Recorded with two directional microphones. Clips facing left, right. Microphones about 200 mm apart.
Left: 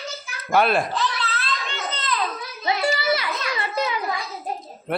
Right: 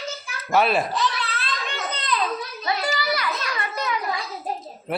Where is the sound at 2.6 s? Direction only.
25° left (ahead or behind).